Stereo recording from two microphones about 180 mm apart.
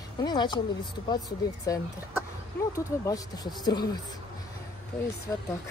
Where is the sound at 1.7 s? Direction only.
20° left (ahead or behind).